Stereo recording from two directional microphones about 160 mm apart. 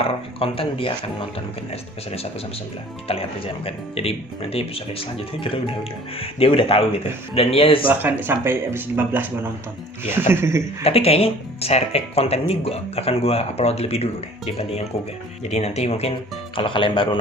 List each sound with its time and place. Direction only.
0.0 s speech: 35° left (ahead or behind)
3.1 s speech: 35° left (ahead or behind)
7.9 s speech: 10° right (ahead or behind)
10.8 s speech: 40° left (ahead or behind)